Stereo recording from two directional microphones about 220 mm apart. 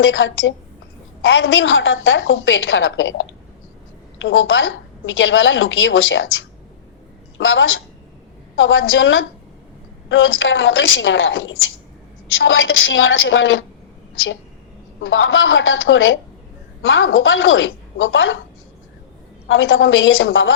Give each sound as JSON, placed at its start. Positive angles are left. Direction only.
{"t": 0.0, "sound": "a woman's voice", "side_deg": 60}
{"t": 15.0, "sound": "a woman's voice", "side_deg": 60}
{"t": 19.5, "sound": "a woman's voice", "side_deg": 60}